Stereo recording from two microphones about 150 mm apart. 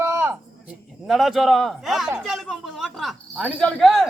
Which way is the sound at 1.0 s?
Centre (ahead or behind).